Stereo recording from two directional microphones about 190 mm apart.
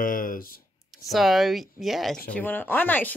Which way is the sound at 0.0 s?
45° left (ahead or behind).